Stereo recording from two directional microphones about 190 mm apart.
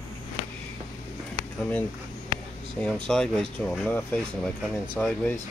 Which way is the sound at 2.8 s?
5° left (ahead or behind).